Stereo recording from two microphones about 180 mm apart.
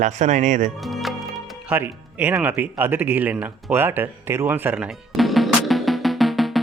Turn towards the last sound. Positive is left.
turn(degrees=0)  # may be behind; listen again after turning